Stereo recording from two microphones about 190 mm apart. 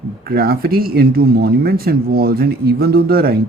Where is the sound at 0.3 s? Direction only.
55° right (ahead or behind).